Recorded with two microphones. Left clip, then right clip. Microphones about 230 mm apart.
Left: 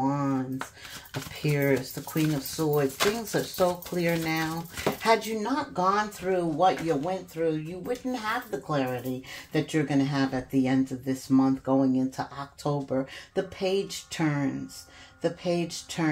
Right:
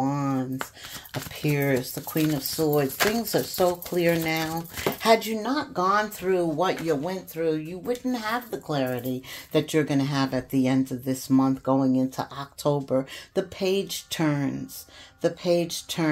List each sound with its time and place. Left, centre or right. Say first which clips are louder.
0.0 s a sound: right 1 dB; right
1.4 s speech: right 1 dB; right
2.2 s speech: right 3 dB; right